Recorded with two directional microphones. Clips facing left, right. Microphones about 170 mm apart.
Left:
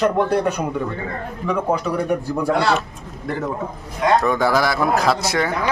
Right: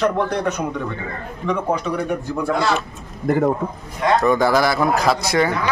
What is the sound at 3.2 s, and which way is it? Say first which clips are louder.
Speech: right 8 dB; 50° right (ahead or behind).